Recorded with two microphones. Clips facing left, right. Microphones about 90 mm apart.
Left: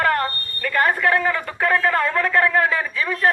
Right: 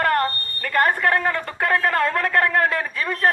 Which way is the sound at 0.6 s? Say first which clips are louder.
Even; 50° right (ahead or behind).